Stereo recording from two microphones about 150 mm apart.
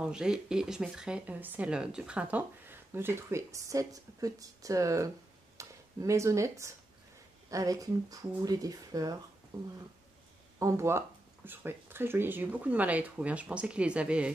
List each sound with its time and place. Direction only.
0.0 s speech: 5° right (ahead or behind)